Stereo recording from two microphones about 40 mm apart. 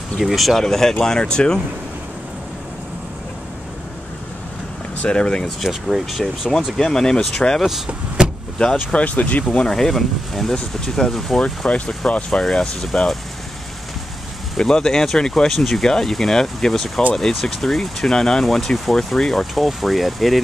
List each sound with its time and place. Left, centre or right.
0.2 s speech: centre
0.6 s speech: centre
5.0 s speech: left
5.6 s speech: centre
6.8 s speech: centre
7.6 s speech: centre
8.7 s speech: left
9.5 s speech: centre
11.4 s speech: left
12.3 s speech: centre
14.6 s speech: centre
19.5 s speech: centre